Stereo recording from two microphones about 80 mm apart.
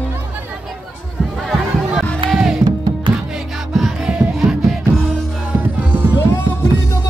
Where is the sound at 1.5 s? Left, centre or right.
Centre.